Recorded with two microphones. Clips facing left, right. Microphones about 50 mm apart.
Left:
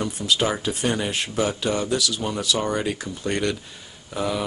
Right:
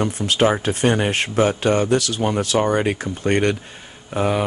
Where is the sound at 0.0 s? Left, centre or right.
Right.